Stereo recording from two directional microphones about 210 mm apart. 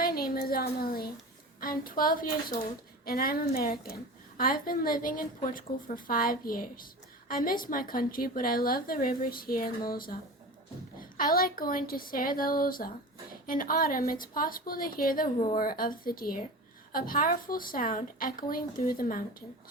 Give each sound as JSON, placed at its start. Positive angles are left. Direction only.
{"t": 0.0, "sound": "a woman's voice", "side_deg": 45}
{"t": 11.2, "sound": "a woman's voice", "side_deg": 45}